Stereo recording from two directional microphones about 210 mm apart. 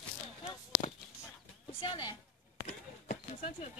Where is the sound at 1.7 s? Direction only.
25° left (ahead or behind).